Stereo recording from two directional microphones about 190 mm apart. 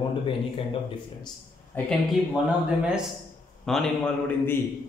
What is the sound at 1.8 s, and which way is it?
Speech, 10° left (ahead or behind).